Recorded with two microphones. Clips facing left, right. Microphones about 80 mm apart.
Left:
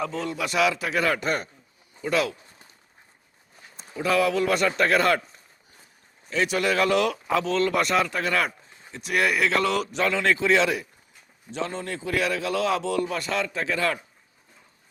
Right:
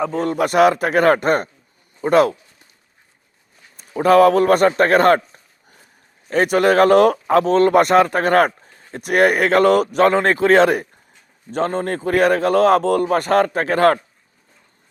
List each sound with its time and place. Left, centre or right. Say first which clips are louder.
0.0 s speech: right 9 dB; right
3.9 s speech: right 11 dB; right
6.2 s speech: right 9 dB; right